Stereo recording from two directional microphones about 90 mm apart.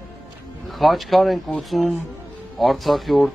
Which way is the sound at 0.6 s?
Centre (ahead or behind).